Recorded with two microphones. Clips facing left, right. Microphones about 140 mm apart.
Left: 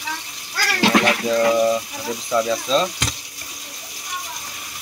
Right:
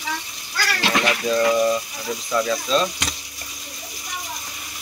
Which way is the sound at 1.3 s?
20° left (ahead or behind).